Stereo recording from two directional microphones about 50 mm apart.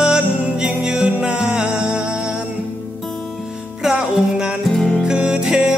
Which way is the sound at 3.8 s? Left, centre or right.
Centre.